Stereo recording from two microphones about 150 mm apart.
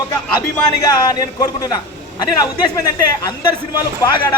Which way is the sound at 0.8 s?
25° left (ahead or behind).